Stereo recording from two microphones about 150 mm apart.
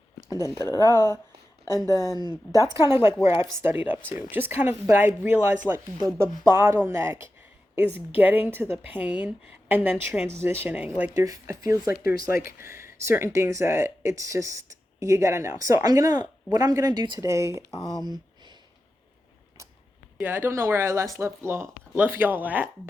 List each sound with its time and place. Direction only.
0.4 s a woman's voice: 20° left (ahead or behind)
2.0 s speech: 25° right (ahead or behind)
11.3 s speech: 20° right (ahead or behind)
11.9 s speech: 90° left
12.5 s speech: 15° right (ahead or behind)
17.2 s speech: 20° right (ahead or behind)
17.7 s speech: 25° left (ahead or behind)
18.0 s a sound: 30° right (ahead or behind)
20.1 s speech: 10° right (ahead or behind)